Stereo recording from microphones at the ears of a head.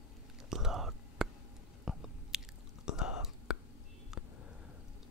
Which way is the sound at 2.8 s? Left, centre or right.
Left.